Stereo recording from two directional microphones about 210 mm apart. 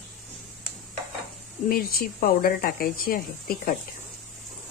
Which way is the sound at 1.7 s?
45° left (ahead or behind).